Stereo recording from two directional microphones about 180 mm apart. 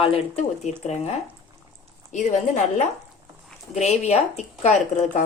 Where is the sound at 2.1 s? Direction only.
40° left (ahead or behind).